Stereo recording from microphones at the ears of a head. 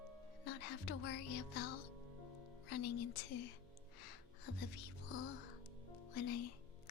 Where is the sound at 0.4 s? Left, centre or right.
Left.